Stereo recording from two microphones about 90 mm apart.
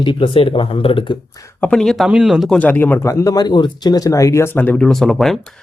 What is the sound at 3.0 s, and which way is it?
Speech, 40° left (ahead or behind).